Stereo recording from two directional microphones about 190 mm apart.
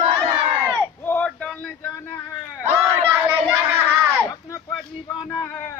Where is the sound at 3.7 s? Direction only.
10° right (ahead or behind).